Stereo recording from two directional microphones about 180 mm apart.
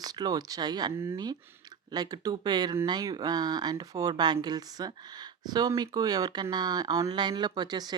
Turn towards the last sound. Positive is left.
turn(degrees=-20)  # may be behind; listen again after turning